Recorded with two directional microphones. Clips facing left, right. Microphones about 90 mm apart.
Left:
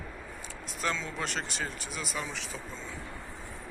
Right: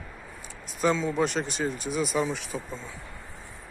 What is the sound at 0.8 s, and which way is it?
Speech, 15° right (ahead or behind).